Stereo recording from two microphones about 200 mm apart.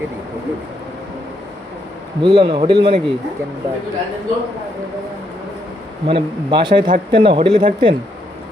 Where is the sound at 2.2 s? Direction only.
25° right (ahead or behind).